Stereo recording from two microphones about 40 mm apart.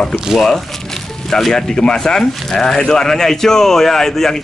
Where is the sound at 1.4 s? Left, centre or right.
Centre.